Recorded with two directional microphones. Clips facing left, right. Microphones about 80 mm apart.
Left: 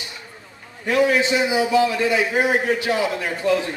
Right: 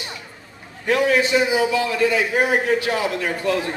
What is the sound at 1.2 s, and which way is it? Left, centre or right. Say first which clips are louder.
A man's voice: right 1 dB; left.